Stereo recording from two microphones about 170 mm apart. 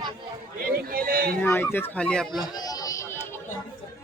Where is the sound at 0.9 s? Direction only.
60° right (ahead or behind).